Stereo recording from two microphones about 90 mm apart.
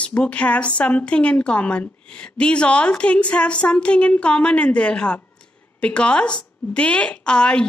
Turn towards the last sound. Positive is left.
turn(degrees=10)  # may be behind; listen again after turning